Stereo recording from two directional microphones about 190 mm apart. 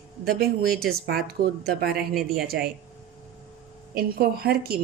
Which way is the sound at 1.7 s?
55° right (ahead or behind).